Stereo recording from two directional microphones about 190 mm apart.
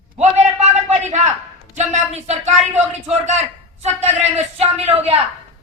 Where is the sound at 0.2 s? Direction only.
35° right (ahead or behind).